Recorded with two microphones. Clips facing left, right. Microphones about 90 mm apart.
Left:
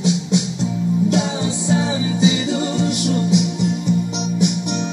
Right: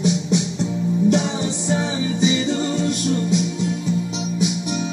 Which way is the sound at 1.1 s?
90° left.